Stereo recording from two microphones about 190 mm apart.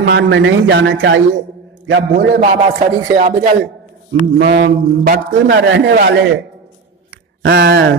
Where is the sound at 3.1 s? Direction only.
45° right (ahead or behind).